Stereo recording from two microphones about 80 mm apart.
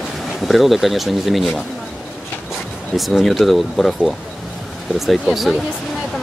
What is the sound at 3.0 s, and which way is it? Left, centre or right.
Speech, centre.